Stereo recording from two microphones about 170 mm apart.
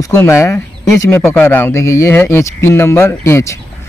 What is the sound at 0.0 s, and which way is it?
Speech, 15° left (ahead or behind).